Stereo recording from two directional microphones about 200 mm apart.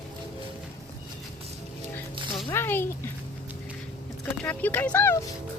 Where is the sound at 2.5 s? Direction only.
10° left (ahead or behind).